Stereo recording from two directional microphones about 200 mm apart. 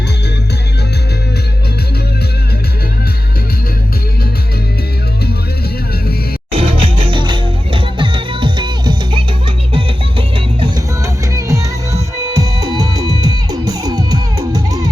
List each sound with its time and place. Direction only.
6.5 s music: 25° right (ahead or behind)
11.0 s music: 15° right (ahead or behind)
13.1 s music: 30° left (ahead or behind)
13.5 s music: 20° right (ahead or behind)